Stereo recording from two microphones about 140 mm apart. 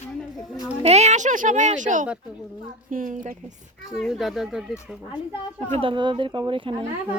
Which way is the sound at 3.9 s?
Centre (ahead or behind).